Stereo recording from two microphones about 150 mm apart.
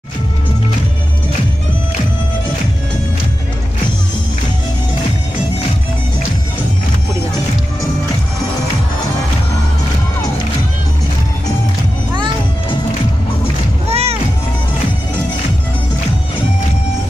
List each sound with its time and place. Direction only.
13.8 s music: 45° right (ahead or behind)